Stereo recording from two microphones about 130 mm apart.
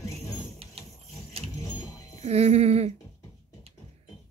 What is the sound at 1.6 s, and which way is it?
Music, 25° left (ahead or behind).